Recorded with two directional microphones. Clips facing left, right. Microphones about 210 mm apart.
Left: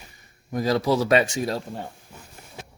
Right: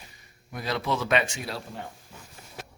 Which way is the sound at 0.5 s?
40° left (ahead or behind).